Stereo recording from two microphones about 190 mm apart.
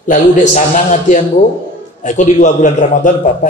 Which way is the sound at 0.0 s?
40° left (ahead or behind).